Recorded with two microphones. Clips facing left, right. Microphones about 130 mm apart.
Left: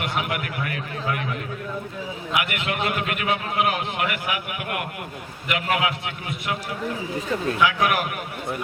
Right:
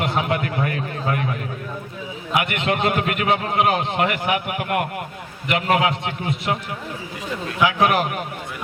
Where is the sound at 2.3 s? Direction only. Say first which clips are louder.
Right 5 dB; 30° right (ahead or behind).